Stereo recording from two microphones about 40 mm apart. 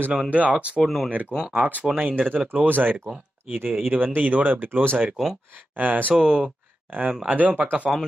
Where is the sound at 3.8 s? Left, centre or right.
Right.